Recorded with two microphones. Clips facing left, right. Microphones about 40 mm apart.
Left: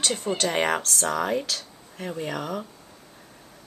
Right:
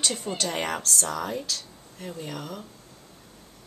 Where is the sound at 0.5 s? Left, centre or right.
Left.